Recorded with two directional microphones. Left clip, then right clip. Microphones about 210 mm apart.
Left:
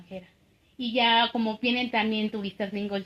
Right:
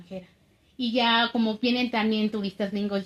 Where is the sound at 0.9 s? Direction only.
45° right (ahead or behind).